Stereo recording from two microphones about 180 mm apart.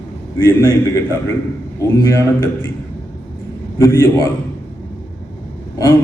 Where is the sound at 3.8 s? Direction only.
15° left (ahead or behind).